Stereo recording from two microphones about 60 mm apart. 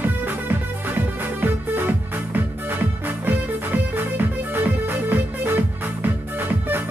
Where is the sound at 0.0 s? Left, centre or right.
Right.